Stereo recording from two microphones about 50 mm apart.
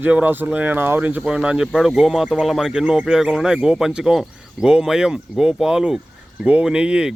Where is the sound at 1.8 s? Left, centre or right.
Centre.